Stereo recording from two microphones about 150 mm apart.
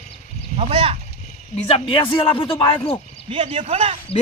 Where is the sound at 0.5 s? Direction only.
40° right (ahead or behind).